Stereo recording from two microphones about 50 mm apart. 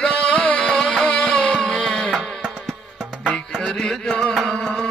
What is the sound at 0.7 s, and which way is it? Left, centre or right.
Music, centre.